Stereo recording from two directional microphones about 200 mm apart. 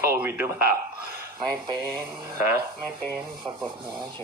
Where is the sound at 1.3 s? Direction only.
20° right (ahead or behind).